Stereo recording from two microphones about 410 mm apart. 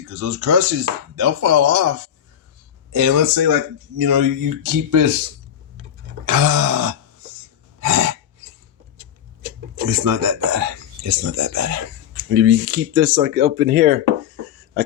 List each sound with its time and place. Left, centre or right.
0.1 s speech: right
2.9 s speech: right
6.2 s a sound: right
9.9 s speech: right